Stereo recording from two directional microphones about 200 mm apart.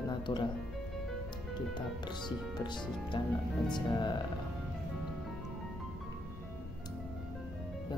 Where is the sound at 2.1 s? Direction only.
20° left (ahead or behind).